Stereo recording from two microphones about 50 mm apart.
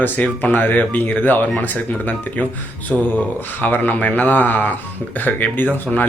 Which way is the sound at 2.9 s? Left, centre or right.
Centre.